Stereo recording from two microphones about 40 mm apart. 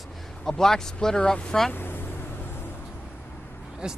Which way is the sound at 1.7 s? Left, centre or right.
Left.